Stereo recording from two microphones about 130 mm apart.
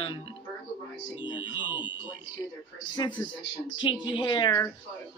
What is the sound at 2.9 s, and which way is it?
Speech, 35° left (ahead or behind).